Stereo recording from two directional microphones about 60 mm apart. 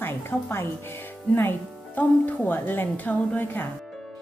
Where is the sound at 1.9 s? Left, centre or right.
Left.